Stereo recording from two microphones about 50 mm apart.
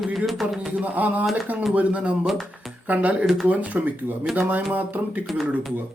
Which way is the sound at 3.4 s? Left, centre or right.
Right.